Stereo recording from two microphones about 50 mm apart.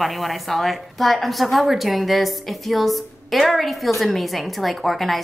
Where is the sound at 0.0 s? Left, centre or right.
Centre.